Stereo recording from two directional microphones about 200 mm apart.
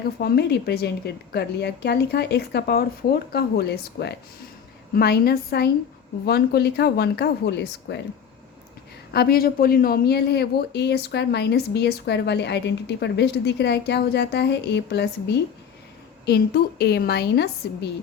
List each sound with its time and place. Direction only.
0.2 s a woman's voice: 55° left (ahead or behind)
9.1 s a woman's voice: 50° left (ahead or behind)